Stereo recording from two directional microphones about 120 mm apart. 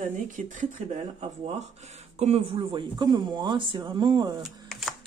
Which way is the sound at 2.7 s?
35° right (ahead or behind).